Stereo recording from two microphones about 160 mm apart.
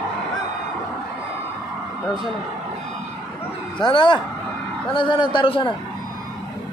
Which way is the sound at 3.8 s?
30° left (ahead or behind).